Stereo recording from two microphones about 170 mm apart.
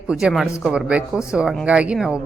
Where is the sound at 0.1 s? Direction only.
5° right (ahead or behind).